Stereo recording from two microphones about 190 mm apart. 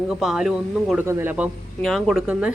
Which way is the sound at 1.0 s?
15° right (ahead or behind).